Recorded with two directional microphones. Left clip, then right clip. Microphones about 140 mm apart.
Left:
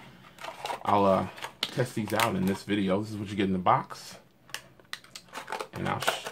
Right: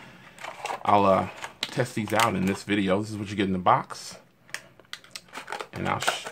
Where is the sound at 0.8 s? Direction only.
30° right (ahead or behind).